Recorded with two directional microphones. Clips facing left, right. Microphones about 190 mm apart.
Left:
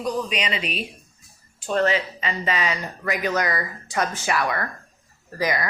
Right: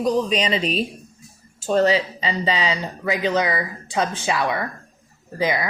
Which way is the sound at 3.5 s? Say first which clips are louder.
Right 2 dB; 10° right (ahead or behind).